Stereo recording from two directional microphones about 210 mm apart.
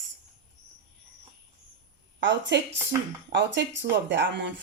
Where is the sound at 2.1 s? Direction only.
60° right (ahead or behind).